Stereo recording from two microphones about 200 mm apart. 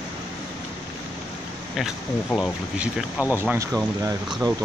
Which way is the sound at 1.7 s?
Centre (ahead or behind).